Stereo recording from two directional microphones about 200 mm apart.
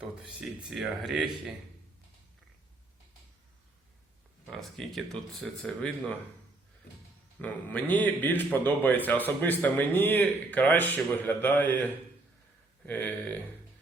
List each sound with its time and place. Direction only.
0.0 s speech: 5° right (ahead or behind)
4.4 s speech: centre (ahead or behind)
7.3 s a man's voice: 5° left (ahead or behind)